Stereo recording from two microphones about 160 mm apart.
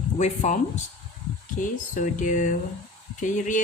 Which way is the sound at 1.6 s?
55° left (ahead or behind).